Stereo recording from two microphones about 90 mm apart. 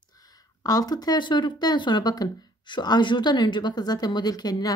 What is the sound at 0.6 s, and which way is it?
Speech, 45° left (ahead or behind).